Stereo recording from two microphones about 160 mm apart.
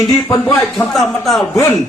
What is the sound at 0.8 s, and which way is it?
Speech, centre (ahead or behind).